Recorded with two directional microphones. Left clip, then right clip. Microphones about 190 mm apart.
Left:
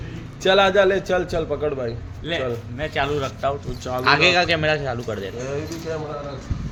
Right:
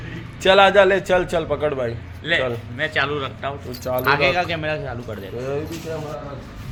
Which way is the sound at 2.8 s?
50° left (ahead or behind).